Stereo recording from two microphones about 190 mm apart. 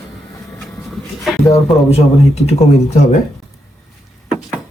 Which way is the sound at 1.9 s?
35° left (ahead or behind).